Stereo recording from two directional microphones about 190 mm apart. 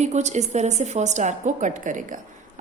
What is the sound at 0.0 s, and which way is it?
A woman's voice, 35° right (ahead or behind).